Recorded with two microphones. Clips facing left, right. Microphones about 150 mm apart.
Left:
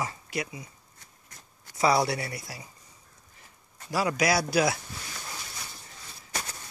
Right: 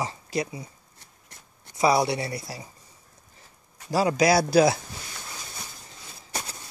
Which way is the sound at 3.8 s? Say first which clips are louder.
Right 5 dB; 30° right (ahead or behind).